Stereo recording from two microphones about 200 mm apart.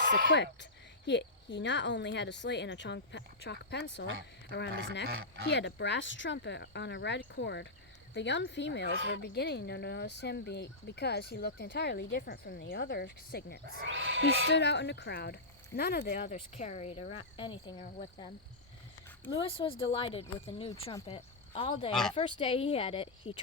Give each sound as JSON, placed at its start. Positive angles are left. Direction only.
{"t": 0.3, "sound": "speech", "side_deg": 60}
{"t": 5.0, "sound": "speech", "side_deg": -55}
{"t": 5.5, "sound": "speech", "side_deg": 60}
{"t": 13.8, "sound": "speech", "side_deg": -70}
{"t": 14.5, "sound": "speech", "side_deg": 60}
{"t": 19.4, "sound": "speech", "side_deg": 25}